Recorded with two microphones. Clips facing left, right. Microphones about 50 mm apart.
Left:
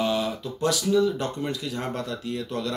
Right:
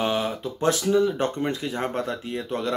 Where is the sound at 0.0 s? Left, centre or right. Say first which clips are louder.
Right 1 dB; right.